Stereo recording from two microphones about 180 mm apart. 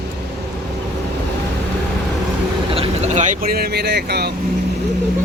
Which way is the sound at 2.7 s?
35° right (ahead or behind).